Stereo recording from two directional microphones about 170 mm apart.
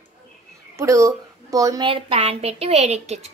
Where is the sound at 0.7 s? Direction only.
20° right (ahead or behind); by 3.3 s 40° right (ahead or behind).